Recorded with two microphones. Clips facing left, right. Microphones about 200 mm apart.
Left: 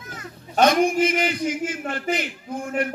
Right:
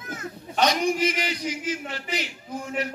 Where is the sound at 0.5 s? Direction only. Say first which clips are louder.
Left 5 dB; 55° left (ahead or behind).